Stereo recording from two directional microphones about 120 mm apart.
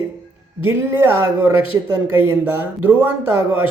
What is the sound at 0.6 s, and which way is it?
A man's voice, 20° right (ahead or behind).